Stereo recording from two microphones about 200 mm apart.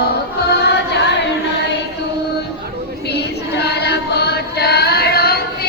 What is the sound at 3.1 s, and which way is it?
Chant, 55° left (ahead or behind).